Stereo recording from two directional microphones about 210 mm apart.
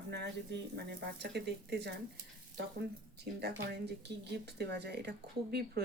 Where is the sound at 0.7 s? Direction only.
50° right (ahead or behind).